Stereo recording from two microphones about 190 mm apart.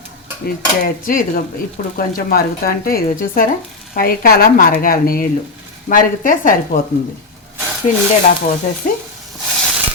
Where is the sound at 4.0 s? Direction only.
50° left (ahead or behind).